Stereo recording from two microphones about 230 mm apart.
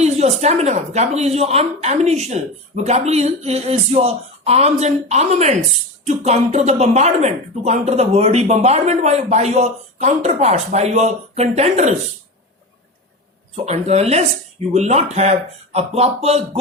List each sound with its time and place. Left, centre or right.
0.0 s speech: right
13.7 s speech: right